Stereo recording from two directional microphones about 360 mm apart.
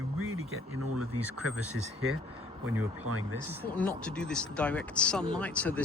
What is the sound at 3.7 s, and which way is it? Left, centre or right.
Speech, centre.